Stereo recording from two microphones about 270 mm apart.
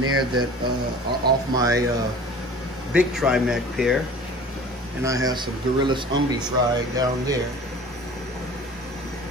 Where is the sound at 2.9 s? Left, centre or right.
Centre.